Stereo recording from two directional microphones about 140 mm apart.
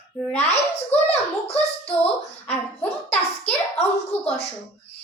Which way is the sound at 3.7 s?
50° left (ahead or behind).